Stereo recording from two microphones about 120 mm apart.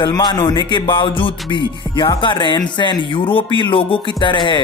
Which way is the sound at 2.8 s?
45° left (ahead or behind).